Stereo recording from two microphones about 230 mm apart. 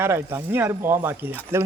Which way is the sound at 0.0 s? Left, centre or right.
Centre.